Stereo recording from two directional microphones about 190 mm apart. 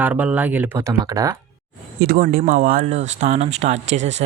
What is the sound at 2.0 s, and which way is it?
Speech, 50° right (ahead or behind).